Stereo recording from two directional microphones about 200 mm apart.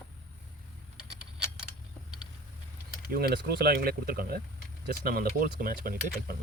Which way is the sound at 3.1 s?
50° right (ahead or behind).